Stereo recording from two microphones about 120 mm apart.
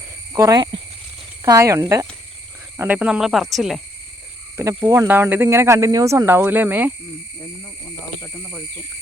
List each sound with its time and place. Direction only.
0.3 s speech: 30° right (ahead or behind)
1.5 s speech: 25° right (ahead or behind)
2.7 s speech: 15° right (ahead or behind)
4.6 s speech: 25° right (ahead or behind)
5.0 s speech: 15° right (ahead or behind)
8.2 s speech: 20° left (ahead or behind)